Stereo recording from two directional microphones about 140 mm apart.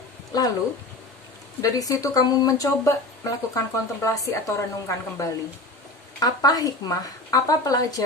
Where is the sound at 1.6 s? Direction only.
25° left (ahead or behind).